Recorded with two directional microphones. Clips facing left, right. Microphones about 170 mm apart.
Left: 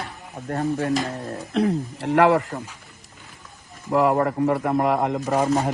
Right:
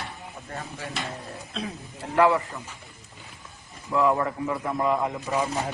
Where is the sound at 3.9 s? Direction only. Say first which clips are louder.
Left 4 dB; 75° left (ahead or behind).